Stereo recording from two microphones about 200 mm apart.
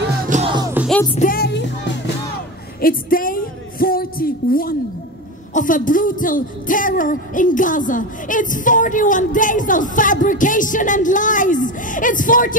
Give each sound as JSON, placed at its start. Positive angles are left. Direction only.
{"t": 0.3, "sound": "music", "side_deg": -30}
{"t": 0.7, "sound": "music", "side_deg": 0}
{"t": 1.1, "sound": "a woman's voice", "side_deg": 45}
{"t": 2.8, "sound": "a woman's voice", "side_deg": 45}
{"t": 3.8, "sound": "music", "side_deg": 45}
{"t": 5.5, "sound": "speech", "side_deg": 40}